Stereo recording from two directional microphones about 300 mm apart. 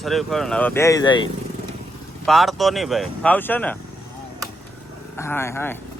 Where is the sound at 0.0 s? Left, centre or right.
Centre.